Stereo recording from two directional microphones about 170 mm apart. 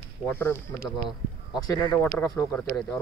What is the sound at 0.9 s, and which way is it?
Speech, 5° right (ahead or behind).